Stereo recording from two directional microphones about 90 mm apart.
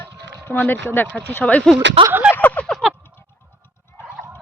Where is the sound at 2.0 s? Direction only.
80° right.